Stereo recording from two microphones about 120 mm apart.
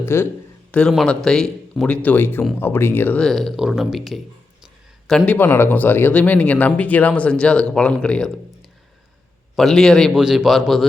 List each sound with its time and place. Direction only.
0.0 s a man's voice: 20° left (ahead or behind)
0.7 s speech: 5° left (ahead or behind)
3.2 s a man's voice: 5° left (ahead or behind)
9.6 s a man's voice: 5° left (ahead or behind)